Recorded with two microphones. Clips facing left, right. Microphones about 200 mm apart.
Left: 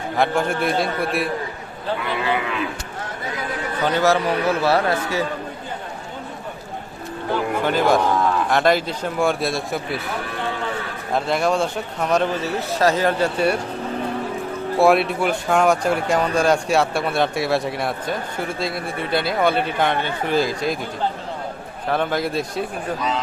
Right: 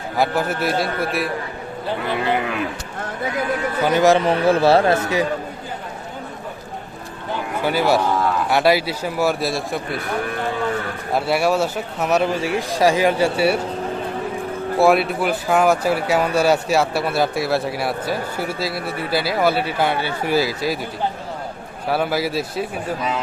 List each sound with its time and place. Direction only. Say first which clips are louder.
0.2 s speech: even; 5° right (ahead or behind)
2.0 s speech: right 3 dB; 45° right (ahead or behind)
3.8 s speech: right 3 dB; 10° right (ahead or behind)
7.6 s a man's voice: right 1 dB; 10° right (ahead or behind)
11.1 s a man's voice: right 1 dB; 10° right (ahead or behind)
14.8 s speech: even; centre (ahead or behind)
21.8 s a man's voice: right 1 dB; 5° right (ahead or behind)